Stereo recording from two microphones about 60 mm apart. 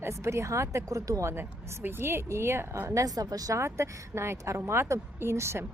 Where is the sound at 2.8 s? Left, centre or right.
Right.